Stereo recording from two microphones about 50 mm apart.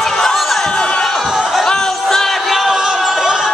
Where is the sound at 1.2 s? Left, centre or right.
Centre.